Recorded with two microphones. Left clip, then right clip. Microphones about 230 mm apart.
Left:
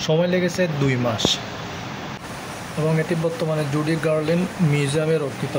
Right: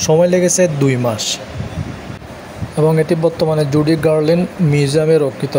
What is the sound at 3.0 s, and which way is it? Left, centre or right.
Speech, right.